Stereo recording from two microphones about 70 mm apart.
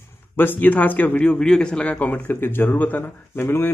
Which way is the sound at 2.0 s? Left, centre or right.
Left.